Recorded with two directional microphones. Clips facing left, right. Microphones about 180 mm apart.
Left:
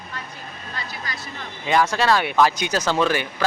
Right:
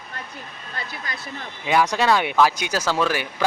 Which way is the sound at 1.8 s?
15° right (ahead or behind).